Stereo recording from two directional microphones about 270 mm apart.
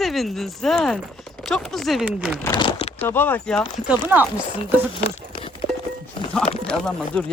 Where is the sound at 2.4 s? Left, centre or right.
Centre.